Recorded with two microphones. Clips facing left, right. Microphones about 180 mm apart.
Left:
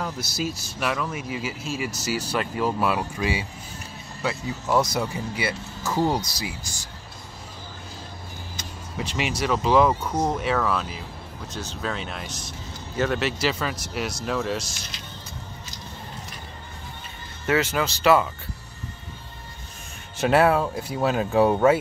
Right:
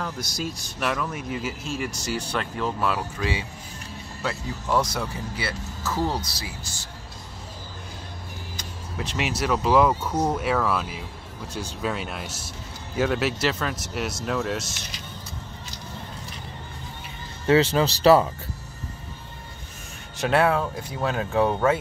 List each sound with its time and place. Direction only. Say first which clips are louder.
0.0 s speech: left 2 dB; 5° left (ahead or behind)
8.9 s speech: even; centre (ahead or behind)
17.5 s speech: right 4 dB; 30° right (ahead or behind)
20.2 s speech: left 2 dB; 5° left (ahead or behind)